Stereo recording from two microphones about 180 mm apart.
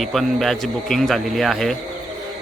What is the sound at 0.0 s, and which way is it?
A man's voice, centre (ahead or behind).